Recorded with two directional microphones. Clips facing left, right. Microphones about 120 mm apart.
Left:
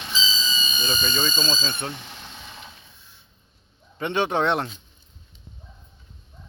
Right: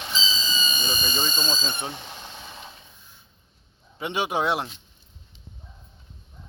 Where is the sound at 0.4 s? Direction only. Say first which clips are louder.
Even; 55° right (ahead or behind).